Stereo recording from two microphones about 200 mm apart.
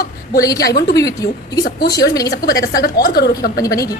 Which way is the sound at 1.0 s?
20° left (ahead or behind).